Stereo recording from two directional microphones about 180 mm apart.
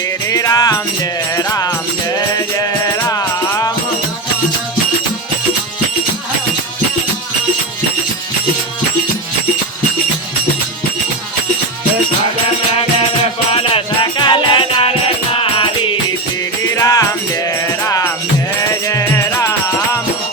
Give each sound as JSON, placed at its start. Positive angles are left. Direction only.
{"t": 0.3, "sound": "music", "side_deg": 20}
{"t": 3.1, "sound": "music", "side_deg": 20}
{"t": 13.5, "sound": "music", "side_deg": 30}
{"t": 16.7, "sound": "music", "side_deg": 20}